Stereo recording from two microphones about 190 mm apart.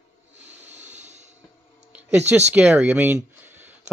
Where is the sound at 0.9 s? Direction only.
35° right (ahead or behind).